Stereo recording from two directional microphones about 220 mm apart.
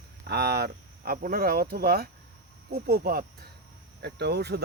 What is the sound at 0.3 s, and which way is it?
Speech, 45° right (ahead or behind).